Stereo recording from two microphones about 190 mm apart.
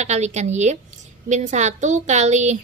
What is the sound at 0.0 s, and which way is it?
A woman's voice, 35° right (ahead or behind).